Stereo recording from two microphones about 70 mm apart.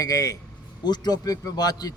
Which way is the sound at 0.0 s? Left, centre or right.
Left.